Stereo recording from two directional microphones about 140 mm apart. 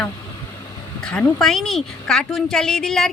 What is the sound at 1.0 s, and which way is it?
A woman's voice, 5° left (ahead or behind).